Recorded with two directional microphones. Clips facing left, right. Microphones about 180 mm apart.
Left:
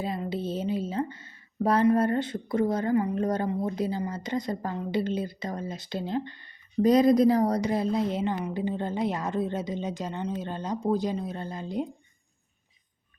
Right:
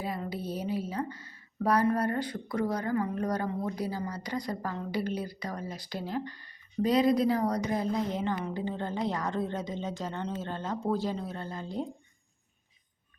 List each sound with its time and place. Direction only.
0.0 s speech: 25° left (ahead or behind)
6.8 s a woman's voice: 45° left (ahead or behind); by 11.9 s 15° left (ahead or behind)